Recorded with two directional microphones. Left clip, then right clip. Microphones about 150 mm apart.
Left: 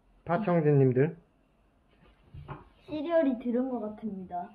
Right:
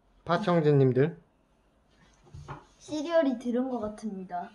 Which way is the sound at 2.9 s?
Centre (ahead or behind).